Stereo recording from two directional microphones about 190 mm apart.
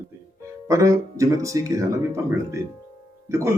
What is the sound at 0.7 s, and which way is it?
Speech, 15° right (ahead or behind).